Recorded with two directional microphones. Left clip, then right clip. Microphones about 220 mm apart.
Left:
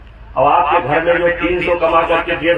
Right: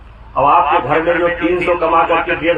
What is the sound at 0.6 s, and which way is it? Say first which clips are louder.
A man's voice: even; centre (ahead or behind).